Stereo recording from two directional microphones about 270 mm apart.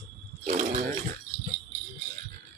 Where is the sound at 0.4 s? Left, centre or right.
Right.